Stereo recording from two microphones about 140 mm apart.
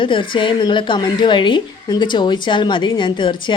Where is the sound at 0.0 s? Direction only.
35° left (ahead or behind).